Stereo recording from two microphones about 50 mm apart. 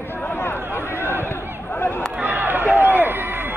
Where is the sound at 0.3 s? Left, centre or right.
Left.